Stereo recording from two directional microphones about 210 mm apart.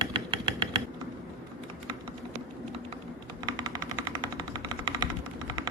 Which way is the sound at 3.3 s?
20° right (ahead or behind).